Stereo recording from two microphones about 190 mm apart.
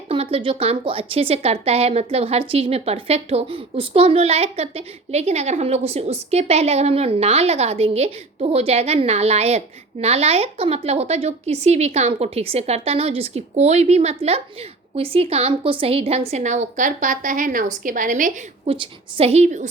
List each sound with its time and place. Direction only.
0.1 s a woman's voice: 30° right (ahead or behind)